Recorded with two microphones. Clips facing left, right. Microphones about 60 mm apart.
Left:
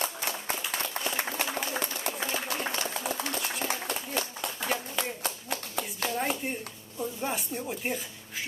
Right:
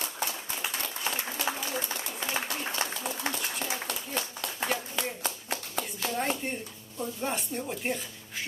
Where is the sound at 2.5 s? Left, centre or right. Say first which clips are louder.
Left 2 dB; left.